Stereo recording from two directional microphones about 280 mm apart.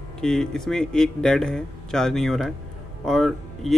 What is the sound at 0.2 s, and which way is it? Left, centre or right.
Speech, centre.